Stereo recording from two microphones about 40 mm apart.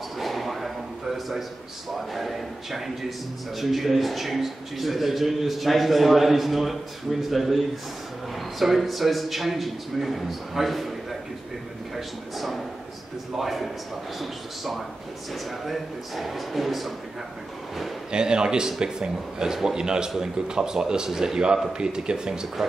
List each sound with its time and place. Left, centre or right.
0.2 s a sound: centre
2.0 s a man's voice: centre
18.1 s speech: right